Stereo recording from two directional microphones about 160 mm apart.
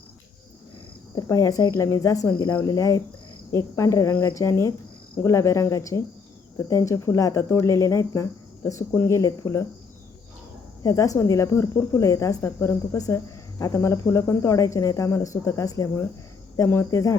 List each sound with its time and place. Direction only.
1.1 s speech: 20° left (ahead or behind)
10.8 s speech: 20° left (ahead or behind)